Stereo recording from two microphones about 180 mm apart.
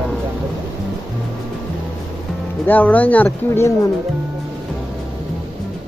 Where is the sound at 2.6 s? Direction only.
10° left (ahead or behind).